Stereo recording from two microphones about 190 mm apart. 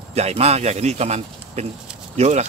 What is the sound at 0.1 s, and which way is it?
Speech, 35° right (ahead or behind).